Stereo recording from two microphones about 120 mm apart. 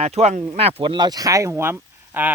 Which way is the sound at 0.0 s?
60° right (ahead or behind).